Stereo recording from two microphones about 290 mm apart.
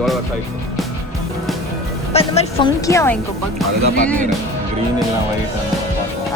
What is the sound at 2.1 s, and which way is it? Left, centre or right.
Speech, centre.